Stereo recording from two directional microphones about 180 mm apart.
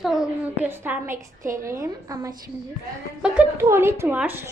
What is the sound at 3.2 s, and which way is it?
A woman's voice, 10° right (ahead or behind).